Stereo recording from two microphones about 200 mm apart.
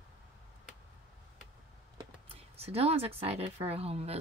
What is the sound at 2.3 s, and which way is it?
Speech, 30° right (ahead or behind).